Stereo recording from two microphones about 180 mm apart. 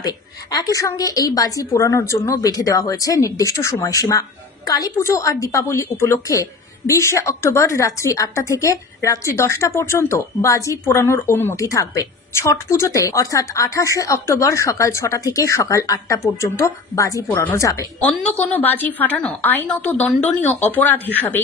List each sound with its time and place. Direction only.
0.0 s a woman's voice: 20° left (ahead or behind)